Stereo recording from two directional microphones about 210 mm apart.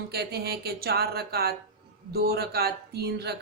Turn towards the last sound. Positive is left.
turn(degrees=-50)  # may be behind; listen again after turning